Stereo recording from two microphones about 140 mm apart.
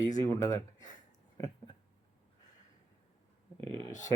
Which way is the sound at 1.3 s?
25° left (ahead or behind).